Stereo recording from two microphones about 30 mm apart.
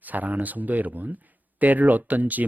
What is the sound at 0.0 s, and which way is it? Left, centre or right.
Speech, right.